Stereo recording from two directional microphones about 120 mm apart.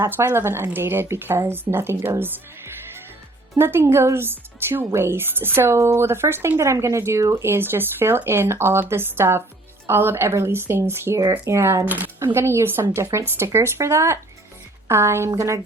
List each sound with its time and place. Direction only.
0.0 s a woman's voice: 20° right (ahead or behind)
3.5 s a woman's voice: 20° right (ahead or behind)